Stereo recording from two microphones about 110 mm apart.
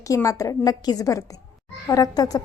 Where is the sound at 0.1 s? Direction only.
30° left (ahead or behind).